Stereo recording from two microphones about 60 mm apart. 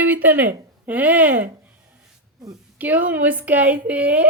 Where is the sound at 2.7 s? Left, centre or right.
Right.